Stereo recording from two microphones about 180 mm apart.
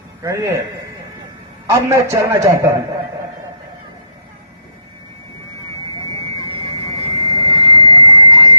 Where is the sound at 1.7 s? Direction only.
15° right (ahead or behind).